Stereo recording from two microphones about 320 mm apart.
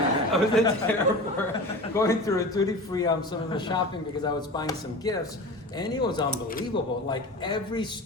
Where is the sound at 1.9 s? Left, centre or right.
Centre.